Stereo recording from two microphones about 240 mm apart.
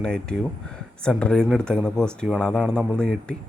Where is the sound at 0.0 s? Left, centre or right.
Centre.